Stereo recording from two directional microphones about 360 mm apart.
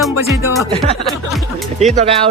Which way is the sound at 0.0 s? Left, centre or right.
Centre.